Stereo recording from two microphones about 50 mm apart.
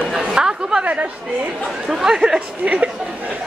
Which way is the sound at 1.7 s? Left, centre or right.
Centre.